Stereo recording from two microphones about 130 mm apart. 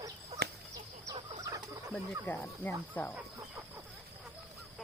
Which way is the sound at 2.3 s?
15° left (ahead or behind).